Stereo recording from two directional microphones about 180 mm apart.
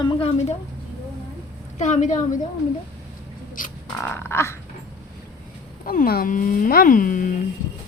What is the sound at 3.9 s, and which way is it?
Speech, 15° left (ahead or behind).